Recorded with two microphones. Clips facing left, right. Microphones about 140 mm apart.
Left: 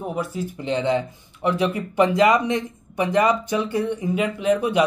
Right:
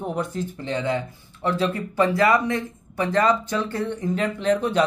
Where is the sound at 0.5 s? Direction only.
20° left (ahead or behind).